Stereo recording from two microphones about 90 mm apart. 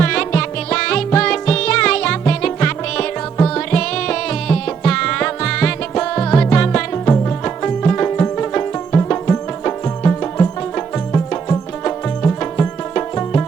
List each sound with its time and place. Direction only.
0.0 s music: 10° left (ahead or behind)
6.9 s music: 20° left (ahead or behind)